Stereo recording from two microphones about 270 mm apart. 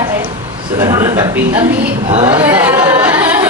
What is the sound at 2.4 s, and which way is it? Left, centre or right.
Speech, centre.